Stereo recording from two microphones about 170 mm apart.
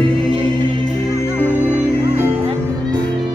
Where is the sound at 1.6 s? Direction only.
10° right (ahead or behind).